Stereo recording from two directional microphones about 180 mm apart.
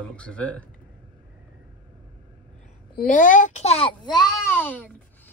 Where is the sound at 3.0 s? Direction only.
45° left (ahead or behind).